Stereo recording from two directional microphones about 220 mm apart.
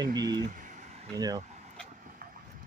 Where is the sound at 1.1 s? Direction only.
15° right (ahead or behind).